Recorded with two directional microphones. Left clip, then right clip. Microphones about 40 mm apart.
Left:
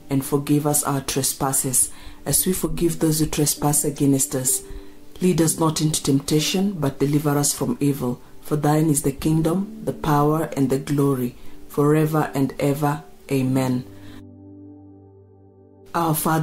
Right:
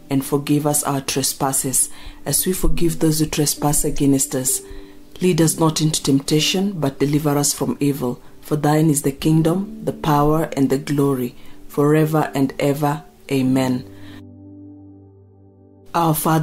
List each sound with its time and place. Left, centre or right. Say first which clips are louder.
0.1 s speech: right 2 dB; right
7.5 s speech: right 2 dB; centre
7.8 s speech: right 2 dB; right
15.9 s speech: right 4 dB; right